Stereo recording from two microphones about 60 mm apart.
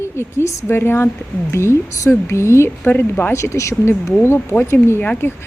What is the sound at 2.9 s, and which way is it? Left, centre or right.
Speech, left.